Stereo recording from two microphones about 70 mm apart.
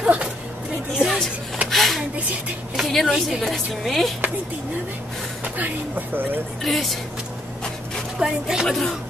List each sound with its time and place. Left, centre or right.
0.0 s a sound: centre
0.9 s a sound: centre
2.7 s a woman's voice: centre
5.4 s speech: right
6.6 s a woman's voice: centre
8.2 s speech: centre
8.6 s a woman's voice: centre